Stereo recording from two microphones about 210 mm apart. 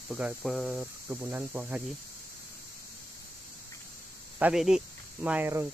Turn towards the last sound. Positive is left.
turn(degrees=-10)  # may be behind; listen again after turning